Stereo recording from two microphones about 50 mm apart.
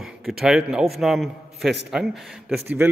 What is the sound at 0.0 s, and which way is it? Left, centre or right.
A man's voice, centre.